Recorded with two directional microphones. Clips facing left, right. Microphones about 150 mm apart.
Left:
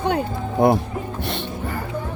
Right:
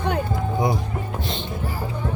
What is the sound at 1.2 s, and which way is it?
Music, 65° left (ahead or behind).